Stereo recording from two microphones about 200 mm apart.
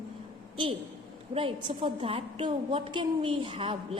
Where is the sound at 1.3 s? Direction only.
25° right (ahead or behind).